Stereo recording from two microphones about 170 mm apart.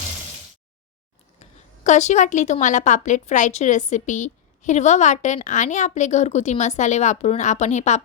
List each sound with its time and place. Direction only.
1.4 s a woman's voice: 45° left (ahead or behind)